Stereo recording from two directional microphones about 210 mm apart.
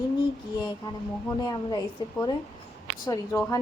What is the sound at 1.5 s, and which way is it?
Speech, 20° left (ahead or behind).